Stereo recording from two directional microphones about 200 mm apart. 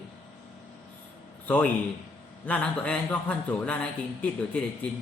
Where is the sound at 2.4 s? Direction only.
5° left (ahead or behind).